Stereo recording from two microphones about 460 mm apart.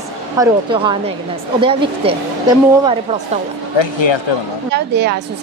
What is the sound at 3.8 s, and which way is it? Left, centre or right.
Speech, left.